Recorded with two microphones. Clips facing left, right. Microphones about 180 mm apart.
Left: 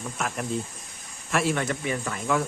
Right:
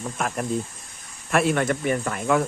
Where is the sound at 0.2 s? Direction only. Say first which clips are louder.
Right 3 dB; 40° right (ahead or behind).